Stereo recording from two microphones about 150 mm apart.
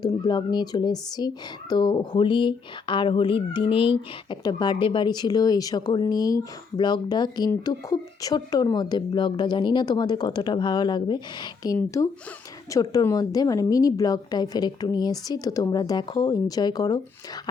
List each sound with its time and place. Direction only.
0.0 s speech: 30° left (ahead or behind)